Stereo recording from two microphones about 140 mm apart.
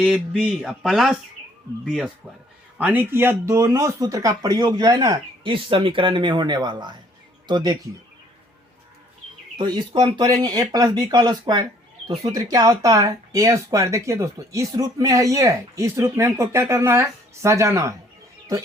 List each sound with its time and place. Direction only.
0.0 s speech: 5° right (ahead or behind)
2.7 s speech: 10° right (ahead or behind)
5.4 s speech: 35° right (ahead or behind)
9.6 s speech: 30° right (ahead or behind)